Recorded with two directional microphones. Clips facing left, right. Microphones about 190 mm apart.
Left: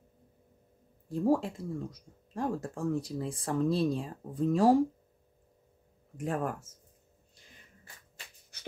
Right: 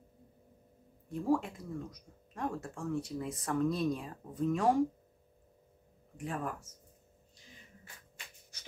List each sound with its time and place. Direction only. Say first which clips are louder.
1.0 s speech: left 4 dB; 35° left (ahead or behind)
6.1 s speech: left 5 dB; 45° left (ahead or behind)